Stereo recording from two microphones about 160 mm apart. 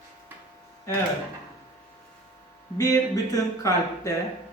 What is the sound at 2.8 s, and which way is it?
Speech, 20° left (ahead or behind).